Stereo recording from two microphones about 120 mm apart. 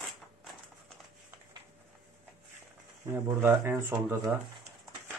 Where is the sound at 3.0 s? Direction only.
20° right (ahead or behind).